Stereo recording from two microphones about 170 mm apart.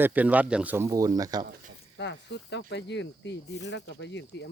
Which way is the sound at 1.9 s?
90° left.